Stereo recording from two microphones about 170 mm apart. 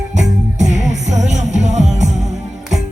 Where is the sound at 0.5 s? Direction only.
45° right (ahead or behind).